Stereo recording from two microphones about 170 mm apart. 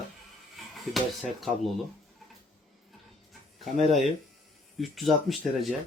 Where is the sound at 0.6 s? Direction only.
Centre (ahead or behind).